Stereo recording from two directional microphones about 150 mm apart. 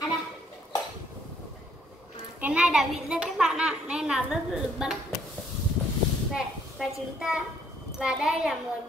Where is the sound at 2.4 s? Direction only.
5° right (ahead or behind).